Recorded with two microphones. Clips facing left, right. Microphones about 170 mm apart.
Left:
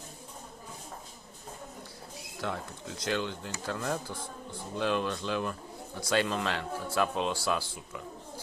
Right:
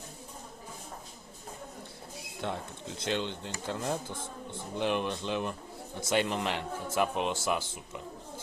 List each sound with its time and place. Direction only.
2.4 s speech: 20° right (ahead or behind)